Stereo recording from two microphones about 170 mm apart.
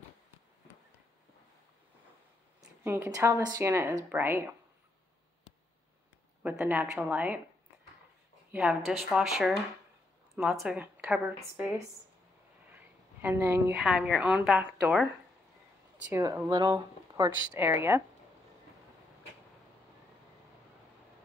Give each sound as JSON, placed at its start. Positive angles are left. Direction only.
{"t": 2.8, "sound": "speech", "side_deg": -15}
{"t": 6.4, "sound": "speech", "side_deg": -10}
{"t": 8.5, "sound": "a woman's voice", "side_deg": -5}
{"t": 12.7, "sound": "a woman's voice", "side_deg": -10}
{"t": 16.1, "sound": "speech", "side_deg": -15}
{"t": 17.6, "sound": "speech", "side_deg": -15}